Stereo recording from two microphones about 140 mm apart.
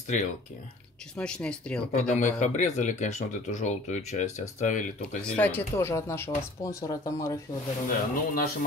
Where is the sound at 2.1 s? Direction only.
60° left (ahead or behind).